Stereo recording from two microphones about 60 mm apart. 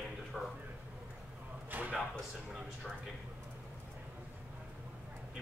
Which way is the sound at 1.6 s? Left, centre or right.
Right.